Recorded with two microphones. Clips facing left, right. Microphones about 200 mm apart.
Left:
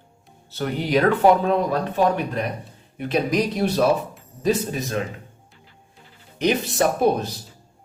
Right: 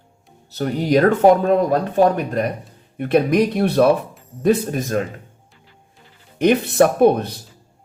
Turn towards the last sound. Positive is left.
turn(degrees=-60)  # may be behind; listen again after turning